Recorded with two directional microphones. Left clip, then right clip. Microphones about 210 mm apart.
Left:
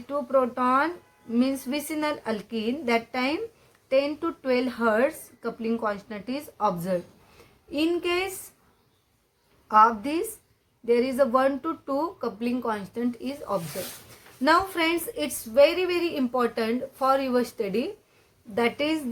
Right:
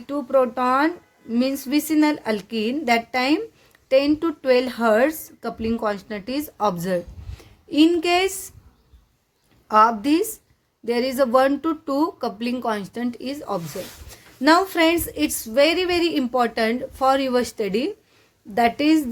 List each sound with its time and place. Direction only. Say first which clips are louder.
0.1 s a woman's voice: right 4 dB; 35° right (ahead or behind)
9.6 s a woman's voice: right 3 dB; 35° right (ahead or behind)